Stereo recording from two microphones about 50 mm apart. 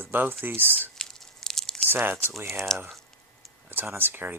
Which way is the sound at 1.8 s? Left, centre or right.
Right.